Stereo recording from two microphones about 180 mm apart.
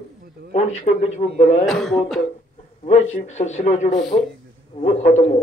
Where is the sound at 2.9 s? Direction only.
40° left (ahead or behind).